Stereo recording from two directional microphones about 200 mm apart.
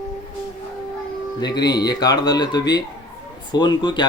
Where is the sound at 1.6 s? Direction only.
20° left (ahead or behind).